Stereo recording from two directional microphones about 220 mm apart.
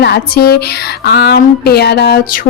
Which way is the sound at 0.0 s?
45° left (ahead or behind).